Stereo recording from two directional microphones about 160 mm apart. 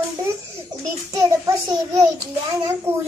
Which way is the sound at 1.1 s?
20° right (ahead or behind).